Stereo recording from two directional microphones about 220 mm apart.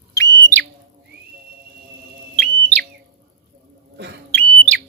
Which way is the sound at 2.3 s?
5° left (ahead or behind).